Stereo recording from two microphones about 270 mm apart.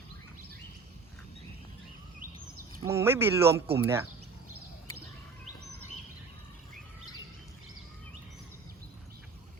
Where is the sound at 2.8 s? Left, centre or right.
Centre.